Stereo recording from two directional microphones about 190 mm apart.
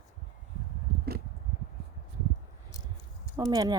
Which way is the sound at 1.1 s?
55° right (ahead or behind).